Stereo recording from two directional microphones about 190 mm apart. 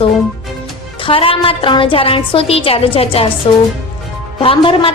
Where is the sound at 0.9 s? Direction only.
30° left (ahead or behind).